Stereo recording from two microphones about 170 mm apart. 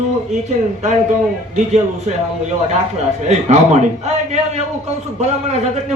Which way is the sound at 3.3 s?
40° right (ahead or behind).